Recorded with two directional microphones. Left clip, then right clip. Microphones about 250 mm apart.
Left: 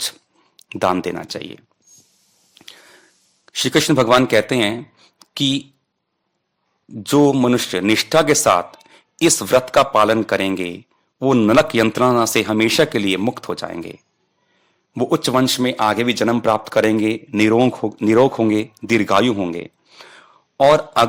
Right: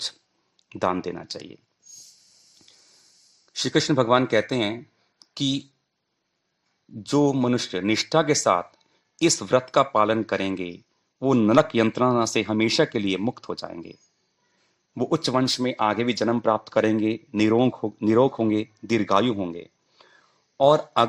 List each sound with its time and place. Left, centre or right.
0.6 s speech: left
3.4 s speech: left
6.9 s speech: left